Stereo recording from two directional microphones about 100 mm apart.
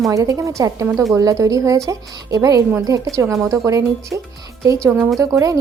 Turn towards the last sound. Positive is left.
turn(degrees=-30)  # may be behind; listen again after turning